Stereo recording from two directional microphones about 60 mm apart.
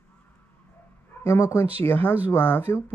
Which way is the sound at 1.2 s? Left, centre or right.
Left.